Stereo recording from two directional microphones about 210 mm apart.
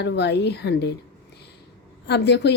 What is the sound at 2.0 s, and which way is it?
Speech, 55° left (ahead or behind).